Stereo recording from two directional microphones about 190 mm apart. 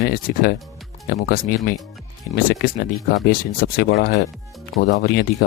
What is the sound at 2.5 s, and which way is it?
Speech, 50° left (ahead or behind).